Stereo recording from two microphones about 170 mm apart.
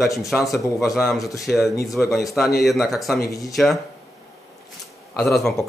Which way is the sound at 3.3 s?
20° left (ahead or behind).